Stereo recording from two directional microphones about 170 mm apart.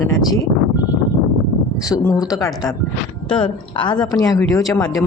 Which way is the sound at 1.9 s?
20° left (ahead or behind).